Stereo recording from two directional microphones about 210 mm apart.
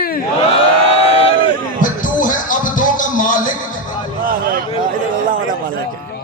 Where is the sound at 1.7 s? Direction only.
40° left (ahead or behind).